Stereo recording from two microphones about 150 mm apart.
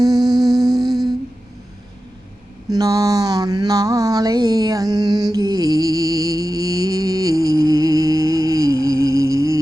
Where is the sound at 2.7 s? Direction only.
25° right (ahead or behind).